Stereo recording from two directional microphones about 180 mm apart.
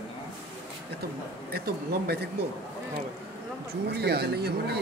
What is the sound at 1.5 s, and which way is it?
Speech, 60° right (ahead or behind).